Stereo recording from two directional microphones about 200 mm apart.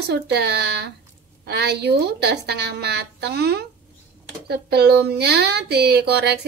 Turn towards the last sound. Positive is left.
turn(degrees=-55)  # may be behind; listen again after turning